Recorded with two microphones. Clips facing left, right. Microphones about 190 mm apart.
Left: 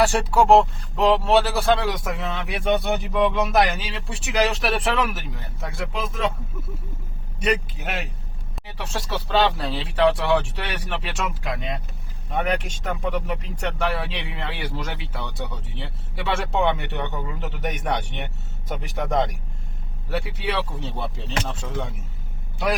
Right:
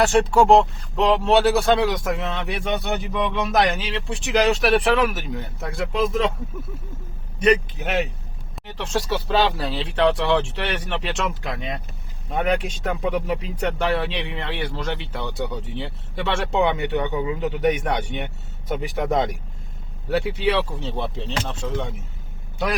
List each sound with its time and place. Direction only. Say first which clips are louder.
0.1 s speech: right 2 dB; 5° left (ahead or behind)
7.4 s speech: right 5 dB; centre (ahead or behind)